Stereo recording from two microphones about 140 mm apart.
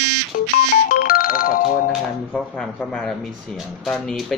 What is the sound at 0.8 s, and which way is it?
Music, 90° left.